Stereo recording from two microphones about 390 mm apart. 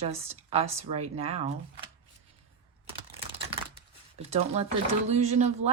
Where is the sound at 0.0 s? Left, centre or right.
Centre.